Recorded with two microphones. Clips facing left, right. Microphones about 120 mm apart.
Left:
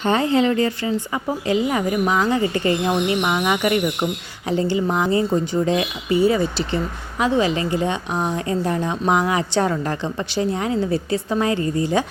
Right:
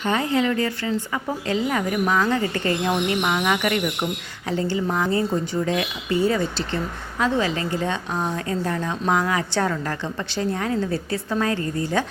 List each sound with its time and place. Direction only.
0.0 s speech: 30° left (ahead or behind)